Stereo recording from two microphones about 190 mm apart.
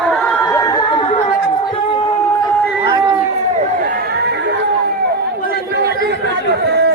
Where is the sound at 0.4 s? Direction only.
15° left (ahead or behind).